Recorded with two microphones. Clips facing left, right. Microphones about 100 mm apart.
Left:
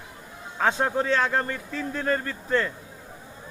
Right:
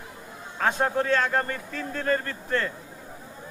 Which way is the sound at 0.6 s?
15° left (ahead or behind).